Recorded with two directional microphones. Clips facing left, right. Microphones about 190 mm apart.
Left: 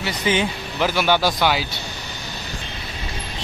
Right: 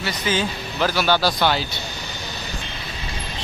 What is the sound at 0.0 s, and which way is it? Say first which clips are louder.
Speech: left 2 dB; 20° left (ahead or behind).